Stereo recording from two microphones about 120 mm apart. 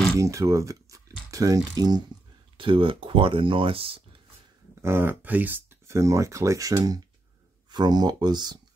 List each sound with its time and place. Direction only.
0.2 s speech: 25° right (ahead or behind)
2.5 s speech: 45° right (ahead or behind)
4.8 s speech: 20° right (ahead or behind); by 8.5 s 35° right (ahead or behind)